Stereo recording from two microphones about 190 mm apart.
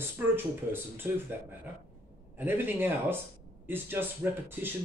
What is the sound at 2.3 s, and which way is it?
Speech, 10° right (ahead or behind).